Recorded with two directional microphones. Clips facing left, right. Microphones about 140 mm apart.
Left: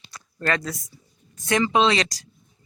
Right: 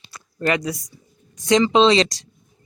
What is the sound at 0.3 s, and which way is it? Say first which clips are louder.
Speech: right 4 dB; 15° right (ahead or behind).